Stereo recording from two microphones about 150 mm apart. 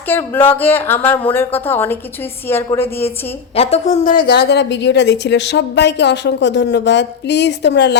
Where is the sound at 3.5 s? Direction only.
45° left (ahead or behind); by 4.5 s 90° left.